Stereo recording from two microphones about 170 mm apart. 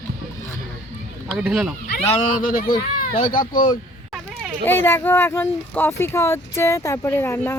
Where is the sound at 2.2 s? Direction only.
55° left (ahead or behind).